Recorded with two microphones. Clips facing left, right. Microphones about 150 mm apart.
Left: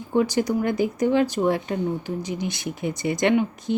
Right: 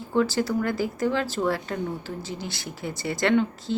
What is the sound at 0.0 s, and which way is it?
Speech, 15° left (ahead or behind).